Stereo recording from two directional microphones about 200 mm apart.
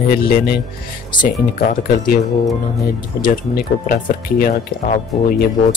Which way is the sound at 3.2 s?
45° left (ahead or behind).